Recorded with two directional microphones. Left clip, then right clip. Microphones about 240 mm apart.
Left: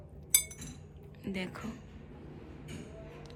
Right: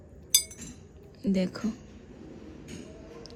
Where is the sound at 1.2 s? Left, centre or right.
Right.